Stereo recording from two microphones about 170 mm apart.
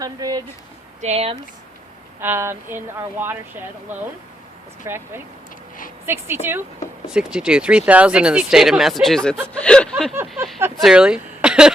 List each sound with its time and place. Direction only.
0.0 s speech: 20° right (ahead or behind)
1.0 s speech: 40° right (ahead or behind)
2.2 s speech: 15° right (ahead or behind)
4.9 s speech: 15° right (ahead or behind); by 10.2 s 5° left (ahead or behind)
10.2 s a sound: centre (ahead or behind)
10.8 s speech: 5° right (ahead or behind)